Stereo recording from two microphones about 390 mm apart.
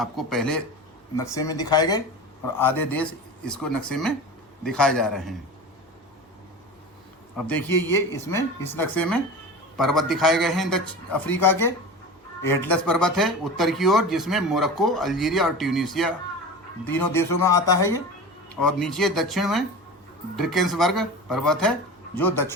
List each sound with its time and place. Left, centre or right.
0.0 s speech: centre
7.3 s speech: centre